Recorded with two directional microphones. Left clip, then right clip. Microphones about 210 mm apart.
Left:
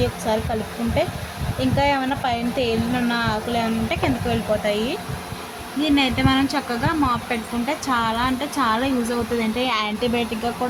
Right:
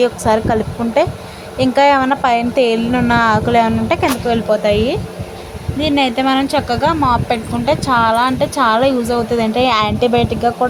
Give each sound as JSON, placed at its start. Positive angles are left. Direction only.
{"t": 1.5, "sound": "speech", "side_deg": -25}